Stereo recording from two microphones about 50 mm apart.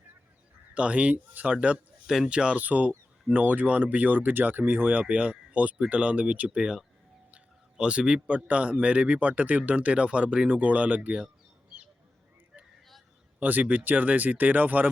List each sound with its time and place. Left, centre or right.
0.7 s speech: right
2.0 s speech: centre
2.3 s speech: right
2.6 s speech: right
5.0 s speech: right
7.3 s a sound: right
8.4 s speech: right
13.4 s speech: right